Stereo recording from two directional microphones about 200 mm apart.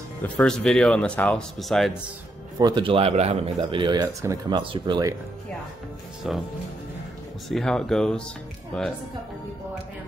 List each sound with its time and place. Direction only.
0.2 s speech: 5° left (ahead or behind)
2.6 s a man's voice: 25° right (ahead or behind)
7.4 s speech: centre (ahead or behind)